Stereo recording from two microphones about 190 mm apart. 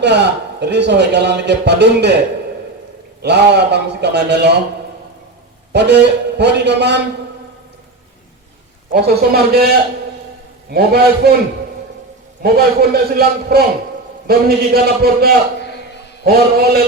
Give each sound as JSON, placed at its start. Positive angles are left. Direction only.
{"t": 0.0, "sound": "a man's voice", "side_deg": -65}
{"t": 3.2, "sound": "a man's voice", "side_deg": -65}
{"t": 5.7, "sound": "a man's voice", "side_deg": -65}
{"t": 8.9, "sound": "a man's voice", "side_deg": -55}
{"t": 10.7, "sound": "a man's voice", "side_deg": -55}
{"t": 12.4, "sound": "a man's voice", "side_deg": -55}
{"t": 15.6, "sound": "a sound", "side_deg": 60}
{"t": 16.2, "sound": "a man's voice", "side_deg": -55}